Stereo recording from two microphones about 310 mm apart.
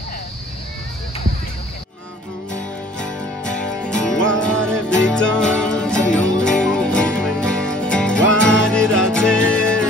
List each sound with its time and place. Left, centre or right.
3.5 s music: centre